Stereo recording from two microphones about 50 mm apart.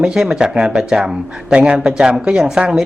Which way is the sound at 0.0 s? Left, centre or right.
Centre.